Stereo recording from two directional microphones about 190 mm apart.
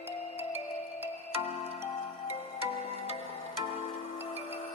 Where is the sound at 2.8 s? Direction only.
30° right (ahead or behind).